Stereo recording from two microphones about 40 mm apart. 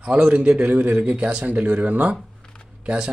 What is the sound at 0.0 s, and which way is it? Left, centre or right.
Speech, right.